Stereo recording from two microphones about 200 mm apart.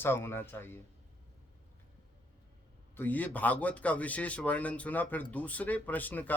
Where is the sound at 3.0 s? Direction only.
10° left (ahead or behind).